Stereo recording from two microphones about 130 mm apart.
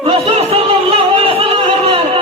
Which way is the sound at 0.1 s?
50° right (ahead or behind).